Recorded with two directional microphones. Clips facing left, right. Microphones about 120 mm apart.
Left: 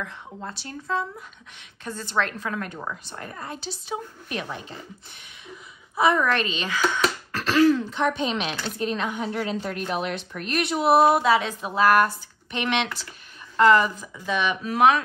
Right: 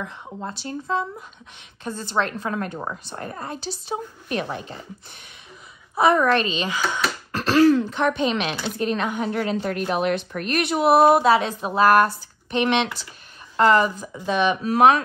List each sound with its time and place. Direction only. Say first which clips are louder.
0.0 s a woman's voice: right 3 dB; 20° right (ahead or behind); by 4.6 s 45° right (ahead or behind)
5.9 s a woman's voice: right 3 dB; 45° right (ahead or behind)
6.4 s speech: right 3 dB; 30° right (ahead or behind)
7.3 s a sound: right 3 dB; 35° right (ahead or behind)
7.7 s a woman's voice: right 3 dB; 60° right (ahead or behind); by 15.0 s 40° right (ahead or behind)